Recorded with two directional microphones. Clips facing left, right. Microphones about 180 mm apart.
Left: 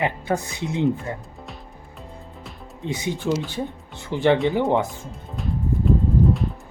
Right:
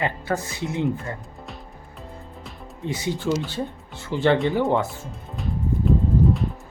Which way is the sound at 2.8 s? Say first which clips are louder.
Even; 15° left (ahead or behind).